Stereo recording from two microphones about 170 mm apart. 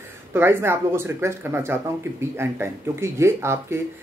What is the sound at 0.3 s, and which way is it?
Speech, 15° right (ahead or behind).